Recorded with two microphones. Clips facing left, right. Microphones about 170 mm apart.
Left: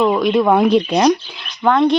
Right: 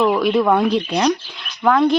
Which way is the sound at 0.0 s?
Centre (ahead or behind).